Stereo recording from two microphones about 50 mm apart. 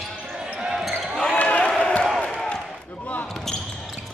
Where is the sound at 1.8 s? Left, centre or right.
Left.